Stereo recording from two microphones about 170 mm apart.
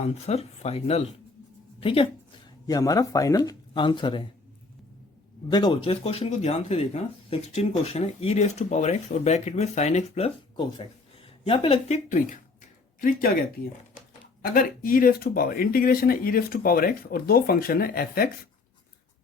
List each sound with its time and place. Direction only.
0.0 s speech: 40° left (ahead or behind)
2.6 s speech: 20° left (ahead or behind)
5.5 s speech: 25° left (ahead or behind)
13.0 s speech: 55° left (ahead or behind)
14.5 s speech: 55° left (ahead or behind)